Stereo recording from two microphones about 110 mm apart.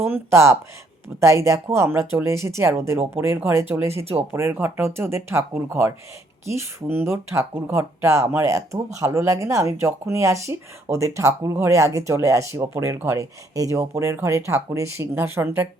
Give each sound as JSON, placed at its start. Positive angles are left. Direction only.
{"t": 0.0, "sound": "speech", "side_deg": -25}